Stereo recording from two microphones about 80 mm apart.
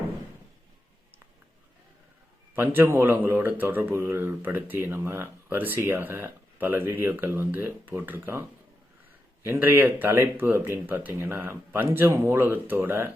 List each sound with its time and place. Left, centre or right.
2.6 s speech: right
9.4 s speech: right